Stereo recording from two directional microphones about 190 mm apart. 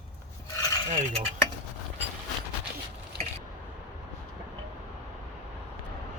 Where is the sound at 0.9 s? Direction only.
40° right (ahead or behind).